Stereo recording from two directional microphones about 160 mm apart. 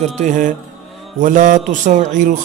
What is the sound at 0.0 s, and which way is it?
A man's voice, 50° right (ahead or behind).